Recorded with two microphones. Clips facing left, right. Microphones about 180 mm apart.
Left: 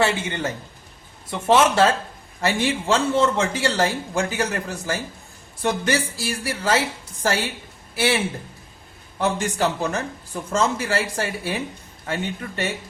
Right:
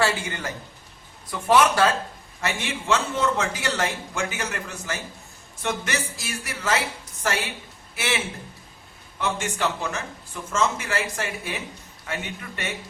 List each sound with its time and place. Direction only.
0.0 s a man's voice: 20° left (ahead or behind)